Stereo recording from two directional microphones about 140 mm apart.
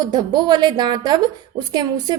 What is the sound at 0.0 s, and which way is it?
A woman's voice, 30° right (ahead or behind).